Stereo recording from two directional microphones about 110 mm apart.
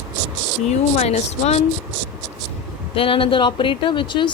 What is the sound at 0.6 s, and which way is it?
Speech, 90° left.